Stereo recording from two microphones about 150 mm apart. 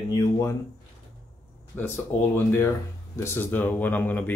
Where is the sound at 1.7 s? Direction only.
15° left (ahead or behind).